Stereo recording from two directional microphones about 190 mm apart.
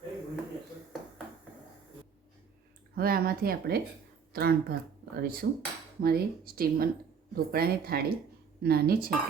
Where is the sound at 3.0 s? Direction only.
50° right (ahead or behind).